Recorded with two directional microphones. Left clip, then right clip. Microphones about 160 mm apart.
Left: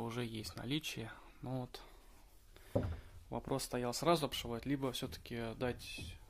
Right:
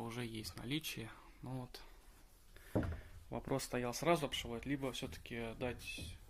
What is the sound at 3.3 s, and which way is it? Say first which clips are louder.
Speech: left 1 dB; 15° left (ahead or behind).